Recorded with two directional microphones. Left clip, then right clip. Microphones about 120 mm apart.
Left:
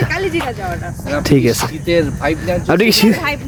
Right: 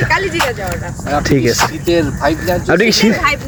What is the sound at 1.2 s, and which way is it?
Speech, 45° left (ahead or behind).